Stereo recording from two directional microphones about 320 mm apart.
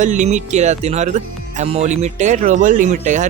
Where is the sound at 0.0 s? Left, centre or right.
Right.